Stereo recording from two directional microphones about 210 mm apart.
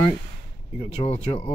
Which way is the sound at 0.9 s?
30° left (ahead or behind).